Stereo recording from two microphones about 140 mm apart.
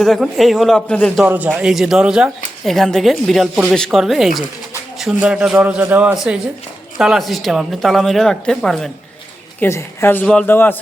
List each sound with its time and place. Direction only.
0.0 s speech: centre (ahead or behind)
1.2 s a man's voice: 10° right (ahead or behind)
9.6 s a woman's voice: 20° left (ahead or behind)